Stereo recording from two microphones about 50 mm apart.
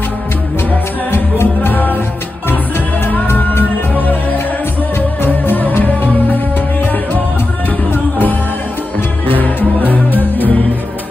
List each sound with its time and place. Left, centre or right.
1.1 s music: left
3.3 s music: left
3.9 s music: left
7.9 s music: left